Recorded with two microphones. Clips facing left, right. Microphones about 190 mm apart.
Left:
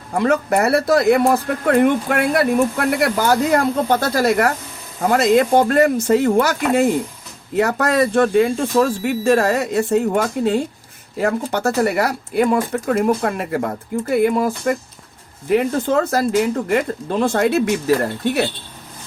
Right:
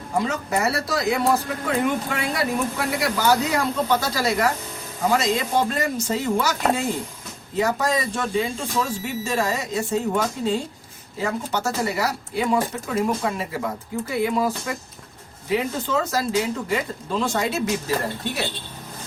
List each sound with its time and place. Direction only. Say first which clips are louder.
0.2 s speech: left 7 dB; 60° left (ahead or behind)